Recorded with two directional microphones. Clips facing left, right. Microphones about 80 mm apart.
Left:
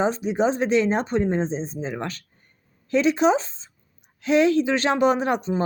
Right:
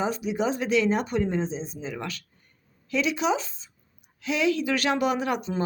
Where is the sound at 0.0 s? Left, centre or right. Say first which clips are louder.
Left 5 dB; left.